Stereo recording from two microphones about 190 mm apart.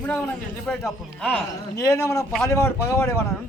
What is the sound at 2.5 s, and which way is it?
Speech, 15° left (ahead or behind).